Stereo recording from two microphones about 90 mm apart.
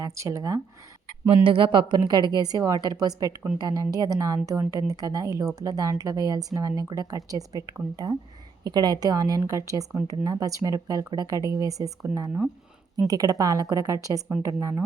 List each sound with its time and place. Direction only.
0.0 s speech: 35° right (ahead or behind)
1.5 s a woman's voice: 65° right (ahead or behind); by 14.8 s 35° right (ahead or behind)